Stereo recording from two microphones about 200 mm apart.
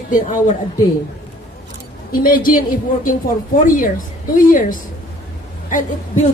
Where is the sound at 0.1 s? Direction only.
40° left (ahead or behind).